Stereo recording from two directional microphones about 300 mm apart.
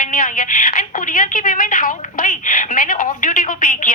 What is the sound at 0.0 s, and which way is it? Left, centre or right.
A woman's voice, left.